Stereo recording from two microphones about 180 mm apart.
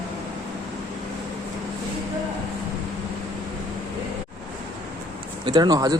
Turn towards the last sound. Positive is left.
turn(degrees=-20)  # may be behind; listen again after turning